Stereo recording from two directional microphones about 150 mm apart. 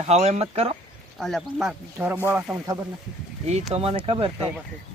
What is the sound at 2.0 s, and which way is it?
Speech, 15° right (ahead or behind).